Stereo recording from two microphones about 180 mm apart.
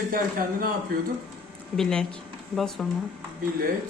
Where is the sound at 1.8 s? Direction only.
5° left (ahead or behind).